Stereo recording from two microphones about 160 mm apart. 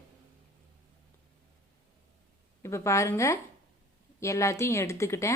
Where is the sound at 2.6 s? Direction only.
15° left (ahead or behind).